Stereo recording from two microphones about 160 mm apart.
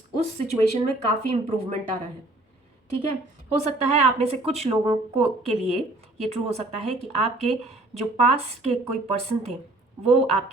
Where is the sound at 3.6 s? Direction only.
40° right (ahead or behind).